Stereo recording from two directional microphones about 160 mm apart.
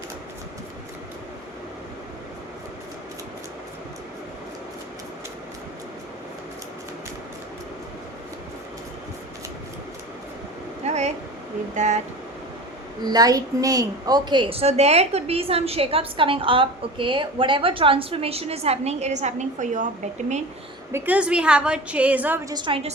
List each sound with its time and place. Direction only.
10.8 s a sound: 45° right (ahead or behind)
11.7 s speech: 50° right (ahead or behind)
13.1 s a woman's voice: 25° right (ahead or behind); by 19.9 s 50° right (ahead or behind)
20.9 s a woman's voice: 10° right (ahead or behind)
22.4 s a woman's voice: 30° right (ahead or behind)